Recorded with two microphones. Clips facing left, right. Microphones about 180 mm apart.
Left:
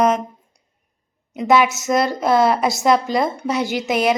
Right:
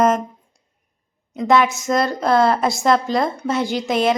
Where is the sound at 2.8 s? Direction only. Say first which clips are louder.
Left 1 dB; centre (ahead or behind).